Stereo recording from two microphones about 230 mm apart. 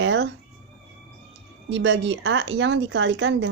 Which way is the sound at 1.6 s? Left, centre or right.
Right.